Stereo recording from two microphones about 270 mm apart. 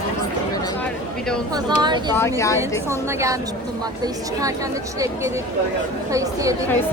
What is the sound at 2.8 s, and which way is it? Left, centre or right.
Speech, centre.